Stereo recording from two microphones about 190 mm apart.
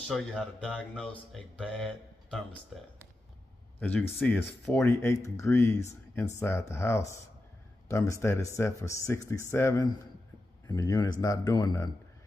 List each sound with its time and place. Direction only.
0.1 s speech: 5° left (ahead or behind)
4.2 s speech: 5° left (ahead or behind)